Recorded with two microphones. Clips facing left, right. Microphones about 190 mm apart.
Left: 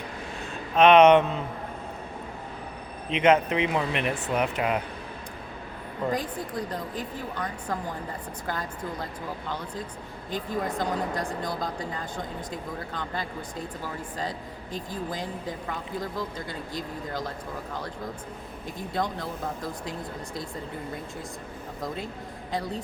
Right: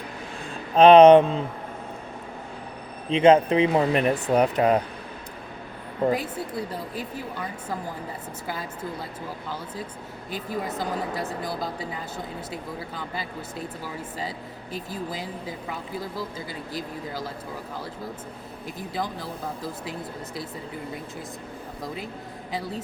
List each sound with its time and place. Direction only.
0.8 s speech: 30° right (ahead or behind)
3.1 s speech: 30° right (ahead or behind)
6.1 s speech: 5° right (ahead or behind)
10.3 s speech: 5° right (ahead or behind)
18.8 s speech: centre (ahead or behind)